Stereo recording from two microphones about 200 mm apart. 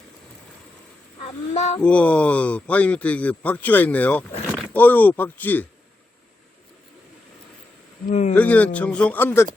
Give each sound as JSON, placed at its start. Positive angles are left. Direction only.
{"t": 1.5, "sound": "speech", "side_deg": 35}
{"t": 1.8, "sound": "speech", "side_deg": 5}
{"t": 8.1, "sound": "speech", "side_deg": 35}
{"t": 8.4, "sound": "speech", "side_deg": 5}